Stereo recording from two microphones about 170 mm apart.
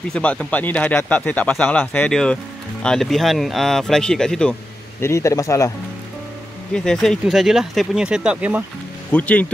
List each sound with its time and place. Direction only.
0.1 s speech: 5° left (ahead or behind)
5.0 s speech: 15° left (ahead or behind)
6.7 s speech: 5° left (ahead or behind)
9.1 s speech: 10° left (ahead or behind)